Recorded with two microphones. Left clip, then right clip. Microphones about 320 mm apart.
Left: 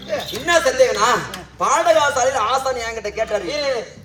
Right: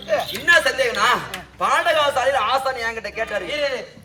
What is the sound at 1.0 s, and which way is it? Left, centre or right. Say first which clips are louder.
A man's voice: left 1 dB; centre.